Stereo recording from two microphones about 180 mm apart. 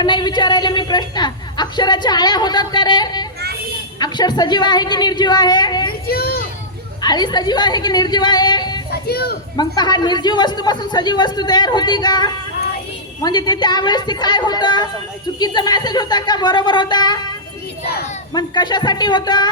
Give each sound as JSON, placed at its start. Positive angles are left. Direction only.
{"t": 0.0, "sound": "speech", "side_deg": 25}
{"t": 6.1, "sound": "a child's voice", "side_deg": 60}
{"t": 7.0, "sound": "speech", "side_deg": 20}
{"t": 8.9, "sound": "speech", "side_deg": 60}
{"t": 9.6, "sound": "speech", "side_deg": 25}
{"t": 18.3, "sound": "speech", "side_deg": 25}